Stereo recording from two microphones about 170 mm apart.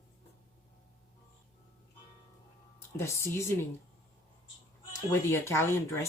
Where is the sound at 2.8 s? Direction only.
15° left (ahead or behind).